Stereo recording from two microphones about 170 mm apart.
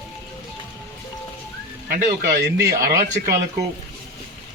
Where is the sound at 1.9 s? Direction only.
60° right (ahead or behind).